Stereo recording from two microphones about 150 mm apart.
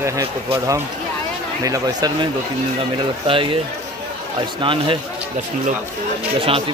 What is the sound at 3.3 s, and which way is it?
Speech, 35° right (ahead or behind).